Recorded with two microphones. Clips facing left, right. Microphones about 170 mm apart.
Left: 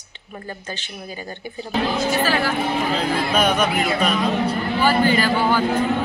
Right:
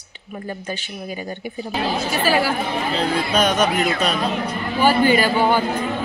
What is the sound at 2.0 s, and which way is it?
Speech, 10° right (ahead or behind).